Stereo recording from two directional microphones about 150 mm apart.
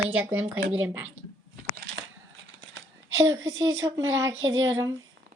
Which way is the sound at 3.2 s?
20° right (ahead or behind).